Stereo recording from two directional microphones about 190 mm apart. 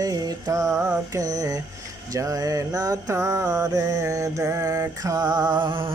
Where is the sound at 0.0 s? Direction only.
20° right (ahead or behind).